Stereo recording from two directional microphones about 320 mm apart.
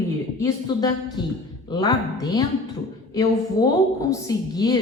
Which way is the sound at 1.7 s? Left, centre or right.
Centre.